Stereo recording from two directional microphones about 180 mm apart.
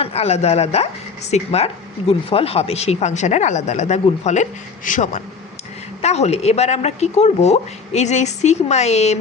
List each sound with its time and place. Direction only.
0.0 s a woman's voice: 35° left (ahead or behind)